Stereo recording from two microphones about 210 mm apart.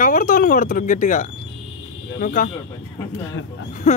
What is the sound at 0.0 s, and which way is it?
Speech, 40° left (ahead or behind).